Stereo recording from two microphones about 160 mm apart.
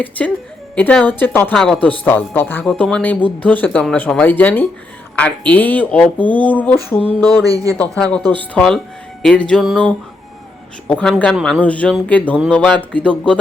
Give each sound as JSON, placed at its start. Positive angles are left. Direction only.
{"t": 0.2, "sound": "speech", "side_deg": 10}
{"t": 7.4, "sound": "speech", "side_deg": -20}
{"t": 7.8, "sound": "music", "side_deg": 5}
{"t": 8.2, "sound": "speech", "side_deg": -30}
{"t": 8.5, "sound": "music", "side_deg": 5}
{"t": 11.6, "sound": "speech", "side_deg": 10}